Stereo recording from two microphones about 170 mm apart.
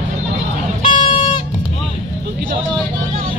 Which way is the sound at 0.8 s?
30° left (ahead or behind).